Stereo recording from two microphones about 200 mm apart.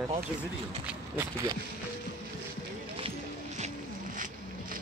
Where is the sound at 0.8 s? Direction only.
10° right (ahead or behind).